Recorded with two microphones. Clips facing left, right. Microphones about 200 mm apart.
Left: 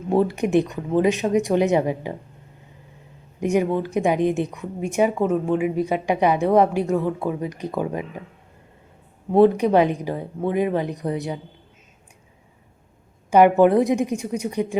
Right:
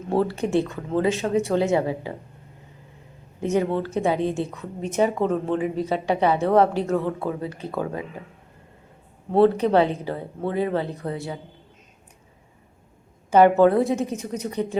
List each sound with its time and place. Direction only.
0.1 s a woman's voice: 15° left (ahead or behind)
3.4 s a woman's voice: 15° left (ahead or behind)
9.3 s a woman's voice: 15° left (ahead or behind)
13.3 s a woman's voice: 15° left (ahead or behind)